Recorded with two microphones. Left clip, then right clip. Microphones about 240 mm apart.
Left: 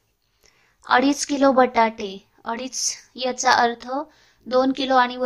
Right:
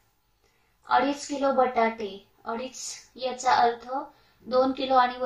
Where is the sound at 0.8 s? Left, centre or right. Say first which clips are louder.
Left 5 dB; left.